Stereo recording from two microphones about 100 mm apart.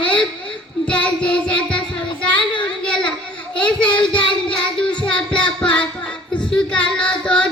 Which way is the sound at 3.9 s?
50° left (ahead or behind).